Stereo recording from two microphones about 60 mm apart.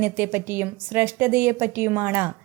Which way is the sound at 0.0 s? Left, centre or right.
Right.